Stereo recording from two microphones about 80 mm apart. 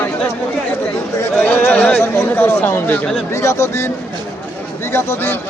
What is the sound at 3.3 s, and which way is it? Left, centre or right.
Speech, left.